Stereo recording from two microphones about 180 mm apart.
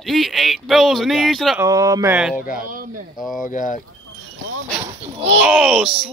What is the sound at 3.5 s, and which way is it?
Speech, 45° left (ahead or behind).